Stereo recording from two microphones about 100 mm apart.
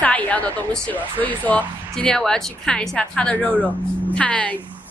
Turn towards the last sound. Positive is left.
turn(degrees=15)  # may be behind; listen again after turning